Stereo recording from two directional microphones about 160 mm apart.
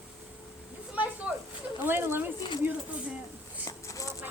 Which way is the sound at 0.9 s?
10° right (ahead or behind).